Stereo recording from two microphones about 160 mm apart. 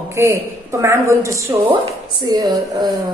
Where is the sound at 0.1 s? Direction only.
15° right (ahead or behind).